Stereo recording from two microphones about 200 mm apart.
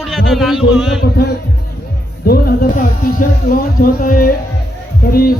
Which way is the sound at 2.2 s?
50° left (ahead or behind).